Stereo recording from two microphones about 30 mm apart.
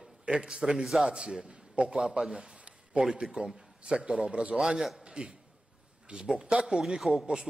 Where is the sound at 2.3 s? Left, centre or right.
Right.